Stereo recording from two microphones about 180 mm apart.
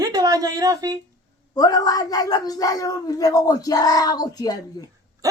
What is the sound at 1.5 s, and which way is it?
Speech, 20° left (ahead or behind).